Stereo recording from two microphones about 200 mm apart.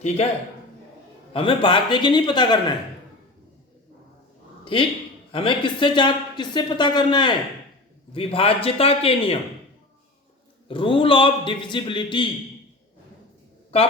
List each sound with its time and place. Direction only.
1.3 s speech: 25° left (ahead or behind)
4.6 s a man's voice: 25° left (ahead or behind)
10.7 s speech: 25° left (ahead or behind)
13.7 s speech: 30° left (ahead or behind)